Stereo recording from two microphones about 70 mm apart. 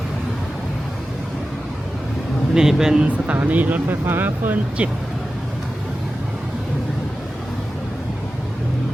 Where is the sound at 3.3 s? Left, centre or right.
Right.